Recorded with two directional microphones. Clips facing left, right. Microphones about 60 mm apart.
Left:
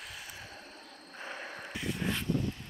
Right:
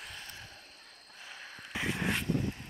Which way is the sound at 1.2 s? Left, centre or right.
Left.